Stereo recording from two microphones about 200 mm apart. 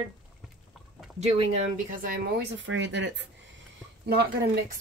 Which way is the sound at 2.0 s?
55° right (ahead or behind).